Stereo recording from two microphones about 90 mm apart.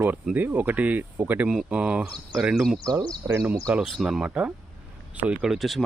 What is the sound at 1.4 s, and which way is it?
Speech, 10° right (ahead or behind).